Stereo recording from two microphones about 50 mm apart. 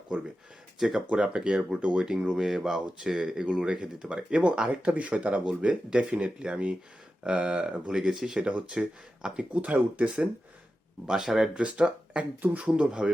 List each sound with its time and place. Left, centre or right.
0.1 s speech: centre
0.8 s speech: centre
1.0 s speech: right
2.5 s speech: centre; by 7.8 s right
7.9 s speech: centre
8.4 s speech: right
11.0 s speech: centre
11.5 s speech: right